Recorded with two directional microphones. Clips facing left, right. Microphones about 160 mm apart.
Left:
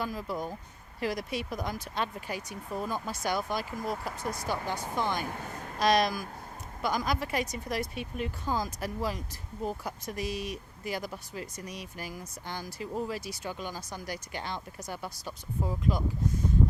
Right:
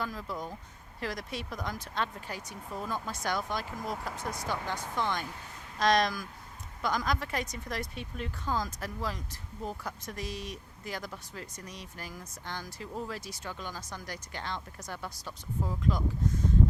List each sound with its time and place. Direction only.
0.0 s speech: 10° left (ahead or behind)
5.3 s speech: 55° left (ahead or behind)
5.8 s speech: 5° left (ahead or behind)